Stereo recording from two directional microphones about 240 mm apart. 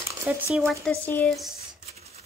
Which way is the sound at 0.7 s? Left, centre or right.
Centre.